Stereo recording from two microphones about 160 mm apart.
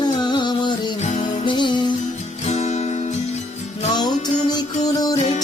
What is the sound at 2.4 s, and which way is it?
Music, 45° left (ahead or behind).